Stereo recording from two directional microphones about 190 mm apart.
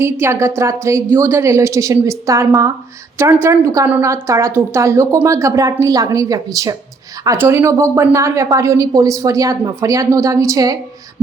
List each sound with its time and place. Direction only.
0.0 s a woman's voice: 15° right (ahead or behind)